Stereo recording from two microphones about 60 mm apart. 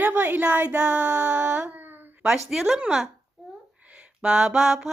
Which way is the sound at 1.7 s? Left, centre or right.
Right.